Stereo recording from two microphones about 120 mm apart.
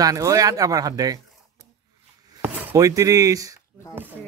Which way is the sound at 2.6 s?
25° right (ahead or behind).